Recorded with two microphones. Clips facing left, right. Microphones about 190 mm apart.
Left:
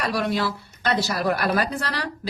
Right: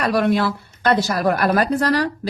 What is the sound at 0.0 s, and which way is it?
Speech, 55° right (ahead or behind).